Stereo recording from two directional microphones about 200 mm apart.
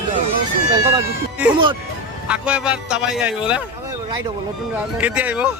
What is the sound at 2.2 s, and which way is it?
A man's voice, 5° right (ahead or behind).